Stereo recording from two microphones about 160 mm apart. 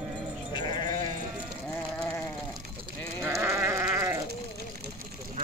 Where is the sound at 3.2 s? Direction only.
20° right (ahead or behind).